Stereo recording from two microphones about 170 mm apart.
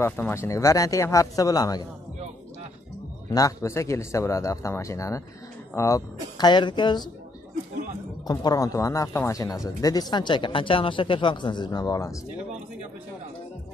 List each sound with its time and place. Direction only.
0.0 s speech: 15° left (ahead or behind)
3.3 s a man's voice: 20° left (ahead or behind)
8.3 s speech: 25° left (ahead or behind)